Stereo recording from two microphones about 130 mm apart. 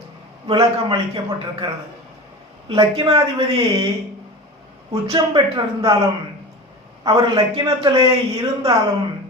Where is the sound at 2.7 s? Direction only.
40° right (ahead or behind).